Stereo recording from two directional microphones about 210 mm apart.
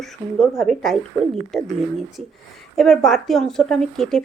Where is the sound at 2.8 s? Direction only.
Centre (ahead or behind).